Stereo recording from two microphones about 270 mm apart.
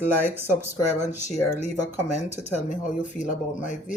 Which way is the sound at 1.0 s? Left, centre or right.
Left.